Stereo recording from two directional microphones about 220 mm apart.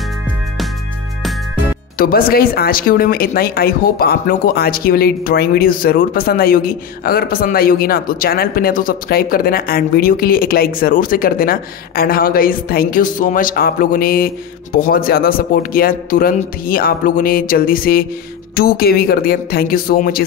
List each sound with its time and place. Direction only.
2.0 s speech: 40° left (ahead or behind)